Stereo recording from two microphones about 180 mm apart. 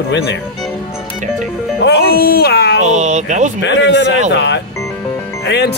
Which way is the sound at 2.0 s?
55° left (ahead or behind).